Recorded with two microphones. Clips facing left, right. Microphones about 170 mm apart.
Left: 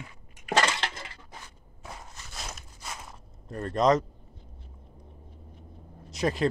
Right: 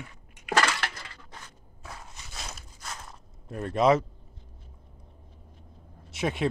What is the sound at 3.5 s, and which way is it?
Speech, 5° right (ahead or behind).